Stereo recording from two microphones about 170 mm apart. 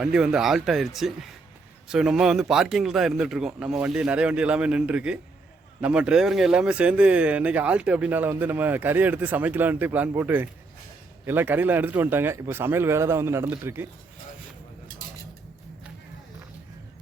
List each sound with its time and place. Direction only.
0.0 s a man's voice: 5° right (ahead or behind)